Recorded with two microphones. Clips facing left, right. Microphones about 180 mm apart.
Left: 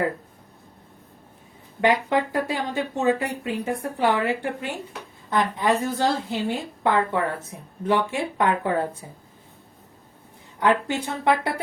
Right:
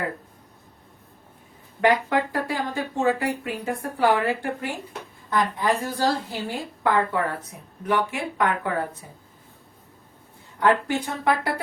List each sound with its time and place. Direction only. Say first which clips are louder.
1.8 s a woman's voice: even; 20° left (ahead or behind)
10.6 s a woman's voice: right 1 dB; 20° left (ahead or behind)